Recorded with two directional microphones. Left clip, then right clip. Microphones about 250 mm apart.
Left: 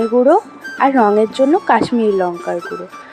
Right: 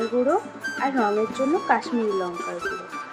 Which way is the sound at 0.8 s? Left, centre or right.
Left.